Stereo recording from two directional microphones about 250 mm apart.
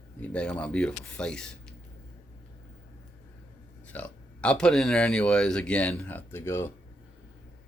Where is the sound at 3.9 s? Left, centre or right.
Centre.